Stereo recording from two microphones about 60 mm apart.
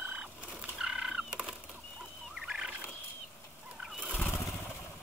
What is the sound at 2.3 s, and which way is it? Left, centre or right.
Fowl, centre.